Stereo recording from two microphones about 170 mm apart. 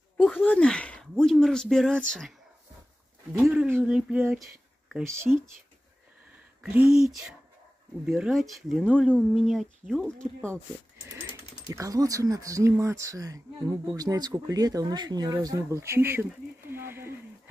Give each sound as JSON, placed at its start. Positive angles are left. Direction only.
{"t": 0.4, "sound": "speech", "side_deg": 10}
{"t": 3.3, "sound": "speech", "side_deg": -10}
{"t": 4.8, "sound": "a sound", "side_deg": 0}
{"t": 6.6, "sound": "speech", "side_deg": -10}
{"t": 11.7, "sound": "speech", "side_deg": -20}